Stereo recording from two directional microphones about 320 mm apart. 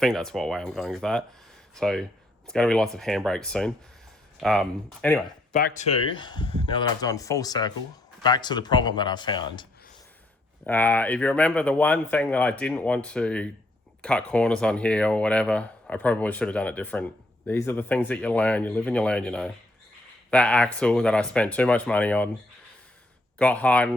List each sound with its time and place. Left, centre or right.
0.0 s speech: centre
5.5 s speech: left; by 22.3 s centre
23.4 s speech: centre